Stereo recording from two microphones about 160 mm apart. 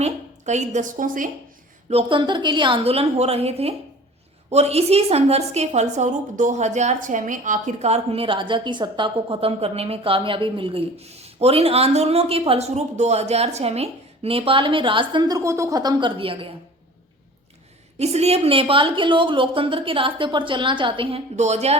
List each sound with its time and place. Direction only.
0.0 s a woman's voice: 45° right (ahead or behind)
1.9 s a woman's voice: 35° right (ahead or behind)
17.9 s a woman's voice: 40° right (ahead or behind)